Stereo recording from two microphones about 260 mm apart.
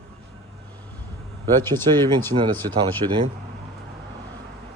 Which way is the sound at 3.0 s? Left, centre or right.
Right.